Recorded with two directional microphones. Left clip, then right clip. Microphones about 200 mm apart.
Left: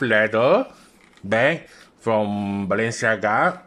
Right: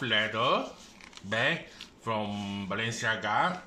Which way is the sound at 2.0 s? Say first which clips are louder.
Left 12 dB; 55° left (ahead or behind).